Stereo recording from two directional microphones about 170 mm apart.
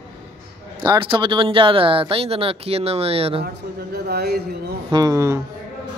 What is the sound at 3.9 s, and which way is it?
Speech, 70° right (ahead or behind).